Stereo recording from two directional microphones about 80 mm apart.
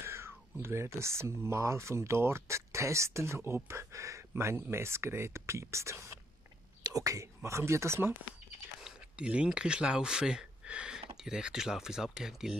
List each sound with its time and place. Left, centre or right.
0.0 s speech: right
8.8 s speech: centre